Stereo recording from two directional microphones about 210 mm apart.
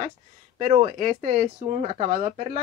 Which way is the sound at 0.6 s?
30° right (ahead or behind).